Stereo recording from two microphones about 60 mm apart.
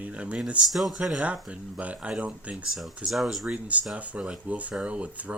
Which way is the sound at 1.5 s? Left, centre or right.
Centre.